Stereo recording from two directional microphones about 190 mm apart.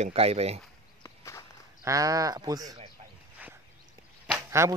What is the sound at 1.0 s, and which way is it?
Walk, 15° left (ahead or behind).